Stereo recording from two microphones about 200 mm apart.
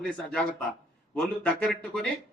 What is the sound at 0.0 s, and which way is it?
Speech, 5° left (ahead or behind).